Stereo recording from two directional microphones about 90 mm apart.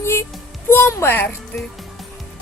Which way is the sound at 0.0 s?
30° left (ahead or behind).